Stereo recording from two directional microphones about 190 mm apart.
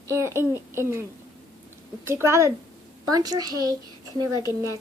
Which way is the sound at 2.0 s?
15° right (ahead or behind).